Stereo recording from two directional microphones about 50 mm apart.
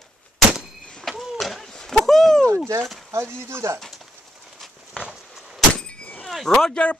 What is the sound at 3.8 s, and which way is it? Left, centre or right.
Bird, centre.